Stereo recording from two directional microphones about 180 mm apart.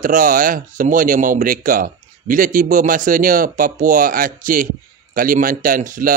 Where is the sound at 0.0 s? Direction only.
50° right (ahead or behind).